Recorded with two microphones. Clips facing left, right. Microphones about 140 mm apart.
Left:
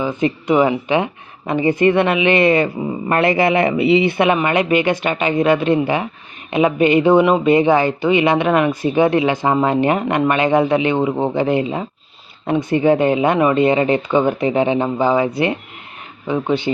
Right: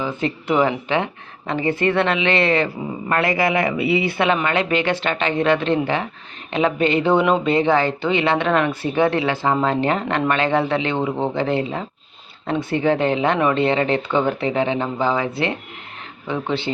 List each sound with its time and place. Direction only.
0.0 s speech: 15° left (ahead or behind)